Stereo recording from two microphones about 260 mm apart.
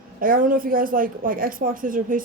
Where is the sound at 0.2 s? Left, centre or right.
Right.